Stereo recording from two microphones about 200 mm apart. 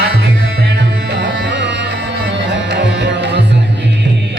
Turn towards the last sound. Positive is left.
turn(degrees=-60)  # may be behind; listen again after turning